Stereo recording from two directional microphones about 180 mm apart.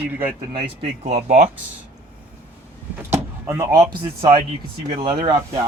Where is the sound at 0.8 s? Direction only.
40° right (ahead or behind).